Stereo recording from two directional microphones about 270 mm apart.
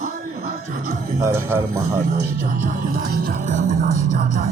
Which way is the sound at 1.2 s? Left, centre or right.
Centre.